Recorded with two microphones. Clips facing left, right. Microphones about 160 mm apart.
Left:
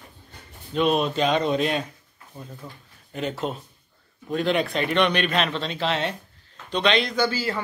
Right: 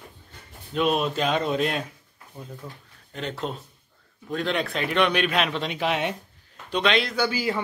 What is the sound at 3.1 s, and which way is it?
A man's voice, 5° left (ahead or behind).